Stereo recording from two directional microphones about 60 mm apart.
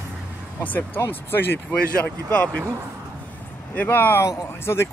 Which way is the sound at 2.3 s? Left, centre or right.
Left.